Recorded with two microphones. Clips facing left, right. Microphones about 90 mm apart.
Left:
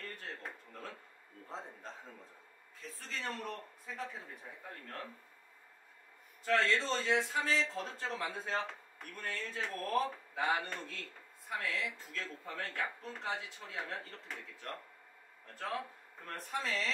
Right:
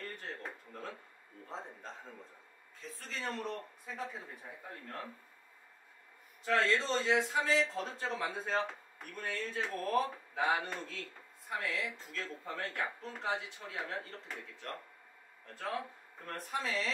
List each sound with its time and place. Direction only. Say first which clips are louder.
0.4 s a sound: right 2 dB; 10° right (ahead or behind)
1.5 s a man's voice: right 1 dB; centre (ahead or behind)
6.4 s a man's voice: right 1 dB; 10° right (ahead or behind)
15.6 s speech: right 1 dB; 10° right (ahead or behind)